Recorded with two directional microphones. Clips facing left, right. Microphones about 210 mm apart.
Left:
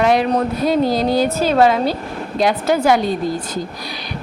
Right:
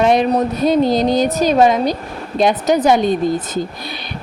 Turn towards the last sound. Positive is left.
turn(degrees=-20)  # may be behind; listen again after turning